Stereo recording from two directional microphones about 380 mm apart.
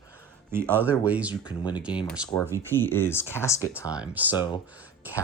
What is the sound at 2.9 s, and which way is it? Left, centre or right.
Speech, centre.